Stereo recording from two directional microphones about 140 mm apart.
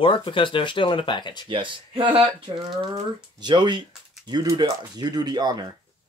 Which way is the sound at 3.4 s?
35° right (ahead or behind).